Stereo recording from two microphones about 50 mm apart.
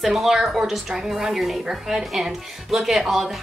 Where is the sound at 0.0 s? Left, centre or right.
Centre.